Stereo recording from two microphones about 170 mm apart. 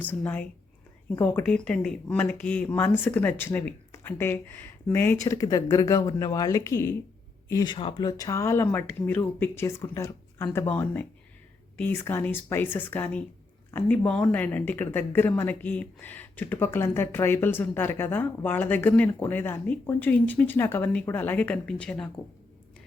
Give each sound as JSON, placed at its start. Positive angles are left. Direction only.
{"t": 0.0, "sound": "speech", "side_deg": 10}